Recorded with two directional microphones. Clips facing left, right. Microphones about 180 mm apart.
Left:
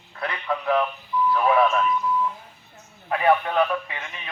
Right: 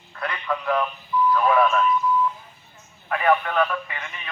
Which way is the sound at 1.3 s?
20° left (ahead or behind).